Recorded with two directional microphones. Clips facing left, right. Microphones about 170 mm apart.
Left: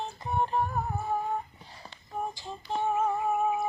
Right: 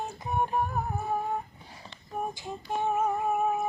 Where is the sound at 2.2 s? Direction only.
15° right (ahead or behind).